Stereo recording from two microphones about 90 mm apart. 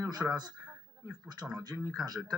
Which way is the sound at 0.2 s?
15° right (ahead or behind).